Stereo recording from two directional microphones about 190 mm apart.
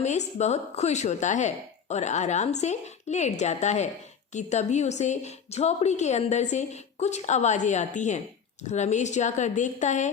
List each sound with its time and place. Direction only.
0.0 s a woman's voice: 35° left (ahead or behind)